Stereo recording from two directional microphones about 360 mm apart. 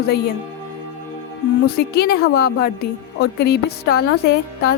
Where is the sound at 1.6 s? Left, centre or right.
Left.